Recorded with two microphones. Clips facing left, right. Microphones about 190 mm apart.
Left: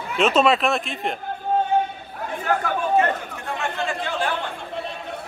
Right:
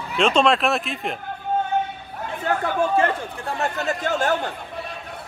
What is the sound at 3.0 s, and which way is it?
Chatter, 35° right (ahead or behind).